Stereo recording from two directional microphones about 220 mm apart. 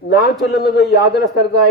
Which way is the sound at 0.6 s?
50° left (ahead or behind).